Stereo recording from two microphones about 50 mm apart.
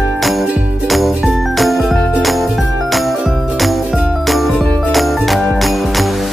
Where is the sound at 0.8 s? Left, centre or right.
Centre.